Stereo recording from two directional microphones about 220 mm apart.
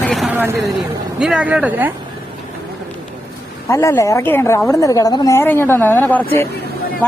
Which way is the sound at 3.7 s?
15° left (ahead or behind).